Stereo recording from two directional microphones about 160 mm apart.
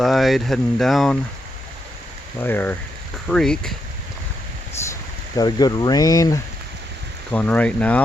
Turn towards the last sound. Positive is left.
turn(degrees=10)  # may be behind; listen again after turning